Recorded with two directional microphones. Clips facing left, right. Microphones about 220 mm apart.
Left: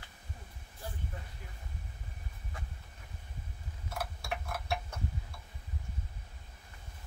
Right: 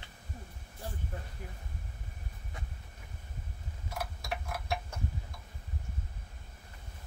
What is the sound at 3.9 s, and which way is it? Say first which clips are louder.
Tick-tock: even; 10° right (ahead or behind).